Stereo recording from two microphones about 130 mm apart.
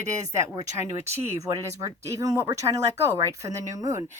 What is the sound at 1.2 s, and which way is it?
Speech, 25° right (ahead or behind).